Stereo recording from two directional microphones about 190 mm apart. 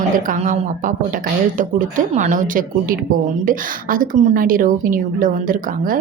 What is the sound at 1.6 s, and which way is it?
A woman's voice, 40° right (ahead or behind).